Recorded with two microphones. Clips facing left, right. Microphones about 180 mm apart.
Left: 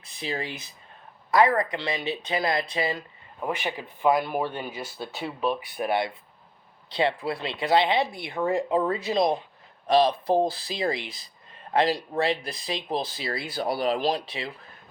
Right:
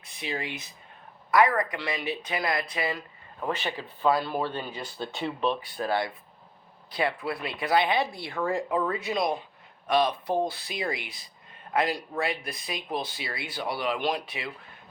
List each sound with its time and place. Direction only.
0.0 s speech: 35° left (ahead or behind)
3.4 s speech: 15° left (ahead or behind); by 14.5 s 30° left (ahead or behind)